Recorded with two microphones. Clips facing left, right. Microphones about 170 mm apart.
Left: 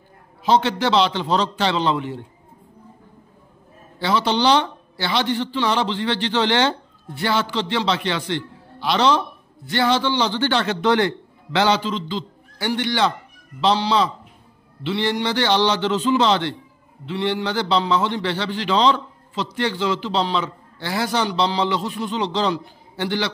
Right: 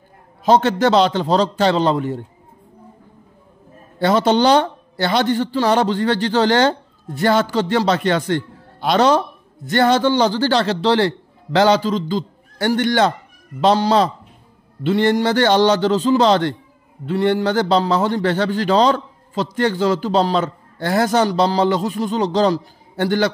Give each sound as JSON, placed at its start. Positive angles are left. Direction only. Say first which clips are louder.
{"t": 0.4, "sound": "a man's voice", "louder": "right 4 dB", "side_deg": -45}
{"t": 4.0, "sound": "a man's voice", "louder": "right 5 dB", "side_deg": -45}